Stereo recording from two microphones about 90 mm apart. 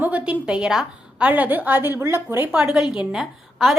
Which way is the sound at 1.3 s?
20° right (ahead or behind).